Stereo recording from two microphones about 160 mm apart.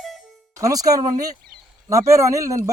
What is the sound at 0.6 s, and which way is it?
Speech, 20° right (ahead or behind).